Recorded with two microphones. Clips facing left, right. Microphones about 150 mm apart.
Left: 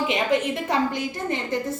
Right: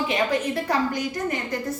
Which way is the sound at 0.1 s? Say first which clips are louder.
Left 1 dB; 20° left (ahead or behind).